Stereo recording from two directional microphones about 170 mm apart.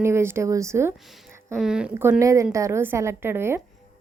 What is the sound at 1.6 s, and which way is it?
A woman's voice, 5° right (ahead or behind).